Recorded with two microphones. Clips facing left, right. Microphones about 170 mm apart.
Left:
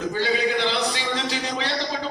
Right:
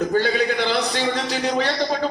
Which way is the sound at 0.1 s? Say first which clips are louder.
Right 3 dB; 50° right (ahead or behind).